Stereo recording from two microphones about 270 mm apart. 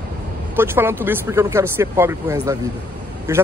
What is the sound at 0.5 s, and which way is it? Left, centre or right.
Speech, centre.